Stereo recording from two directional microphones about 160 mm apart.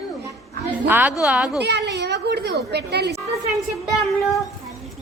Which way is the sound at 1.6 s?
90° right.